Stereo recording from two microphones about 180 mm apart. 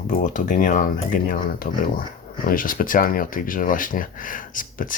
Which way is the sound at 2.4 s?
50° left (ahead or behind).